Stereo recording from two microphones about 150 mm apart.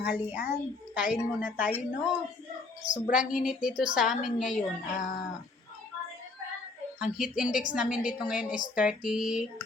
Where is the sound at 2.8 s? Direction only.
55° left (ahead or behind).